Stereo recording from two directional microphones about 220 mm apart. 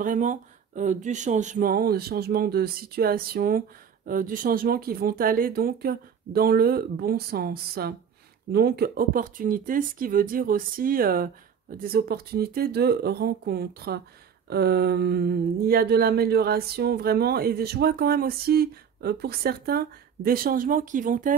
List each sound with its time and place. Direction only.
0.0 s speech: 35° right (ahead or behind)